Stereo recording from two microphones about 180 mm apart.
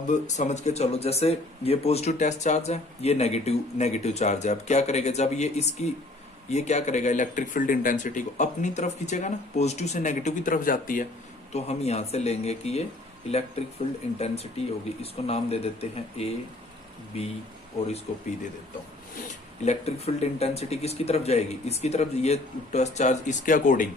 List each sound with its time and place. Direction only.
0.1 s speech: 40° left (ahead or behind)
11.5 s speech: 35° left (ahead or behind)
14.2 s speech: 35° left (ahead or behind)
19.6 s speech: 35° left (ahead or behind)